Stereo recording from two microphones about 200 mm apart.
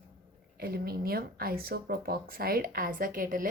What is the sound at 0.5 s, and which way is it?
Speech, 50° right (ahead or behind).